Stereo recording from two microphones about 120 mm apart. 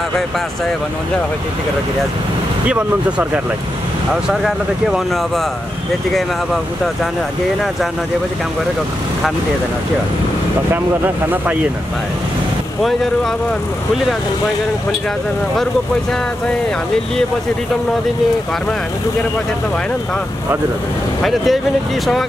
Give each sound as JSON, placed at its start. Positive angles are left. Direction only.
{"t": 4.3, "sound": "speech", "side_deg": -5}
{"t": 21.2, "sound": "speech", "side_deg": 0}